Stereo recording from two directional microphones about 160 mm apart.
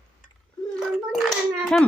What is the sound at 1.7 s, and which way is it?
Speech, 5° left (ahead or behind).